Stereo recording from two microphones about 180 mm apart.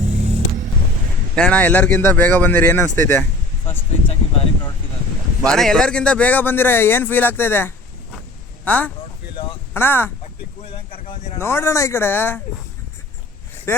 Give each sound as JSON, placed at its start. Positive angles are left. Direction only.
{"t": 1.4, "sound": "speech", "side_deg": 5}
{"t": 3.7, "sound": "speech", "side_deg": 30}
{"t": 5.4, "sound": "speech", "side_deg": 0}
{"t": 11.3, "sound": "speech", "side_deg": 15}
{"t": 13.7, "sound": "speech", "side_deg": 15}